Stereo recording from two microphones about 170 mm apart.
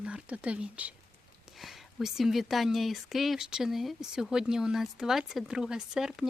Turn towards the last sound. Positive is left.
turn(degrees=-5)  # may be behind; listen again after turning